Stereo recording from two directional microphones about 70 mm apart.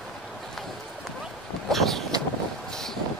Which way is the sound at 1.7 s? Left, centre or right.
Centre.